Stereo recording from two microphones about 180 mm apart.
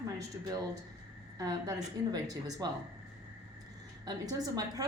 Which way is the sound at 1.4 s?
20° right (ahead or behind).